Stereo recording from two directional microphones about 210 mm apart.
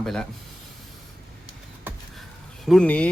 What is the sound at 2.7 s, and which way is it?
Speech, 5° left (ahead or behind).